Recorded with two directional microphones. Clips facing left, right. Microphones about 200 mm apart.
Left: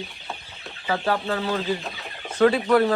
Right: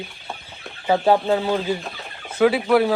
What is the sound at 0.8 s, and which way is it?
Speech, 20° right (ahead or behind).